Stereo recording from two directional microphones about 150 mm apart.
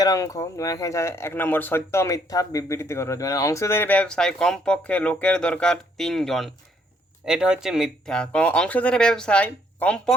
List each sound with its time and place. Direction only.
0.0 s speech: 25° left (ahead or behind); by 10.2 s 5° left (ahead or behind)